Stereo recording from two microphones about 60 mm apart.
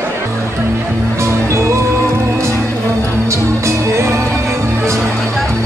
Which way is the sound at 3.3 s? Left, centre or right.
Right.